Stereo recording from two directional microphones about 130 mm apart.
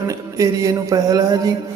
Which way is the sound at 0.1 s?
25° right (ahead or behind).